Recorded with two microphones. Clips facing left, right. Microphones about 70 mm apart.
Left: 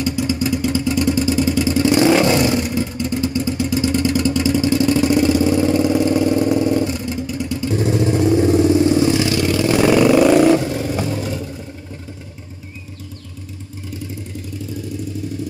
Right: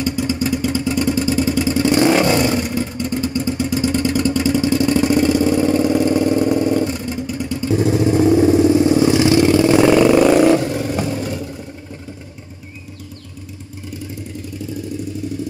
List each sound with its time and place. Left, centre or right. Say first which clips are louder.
0.0 s vehicle: even; centre
8.5 s vehicle: right 1 dB; right
9.8 s vehicle: left 3 dB; centre